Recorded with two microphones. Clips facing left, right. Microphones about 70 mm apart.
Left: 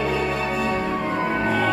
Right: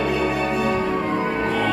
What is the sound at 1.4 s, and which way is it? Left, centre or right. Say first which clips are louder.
Music: even; centre.